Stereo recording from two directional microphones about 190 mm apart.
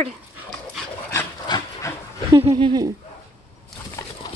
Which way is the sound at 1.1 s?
20° left (ahead or behind).